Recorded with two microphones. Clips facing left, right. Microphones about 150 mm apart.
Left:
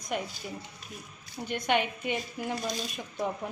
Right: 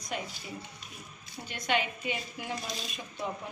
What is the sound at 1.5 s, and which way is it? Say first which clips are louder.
Speech: left 3 dB; 55° left (ahead or behind).